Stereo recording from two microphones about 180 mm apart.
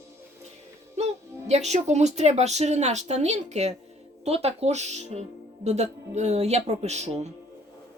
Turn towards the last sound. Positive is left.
turn(degrees=-40)  # may be behind; listen again after turning